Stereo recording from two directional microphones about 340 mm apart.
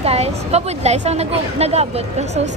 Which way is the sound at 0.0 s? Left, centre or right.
Centre.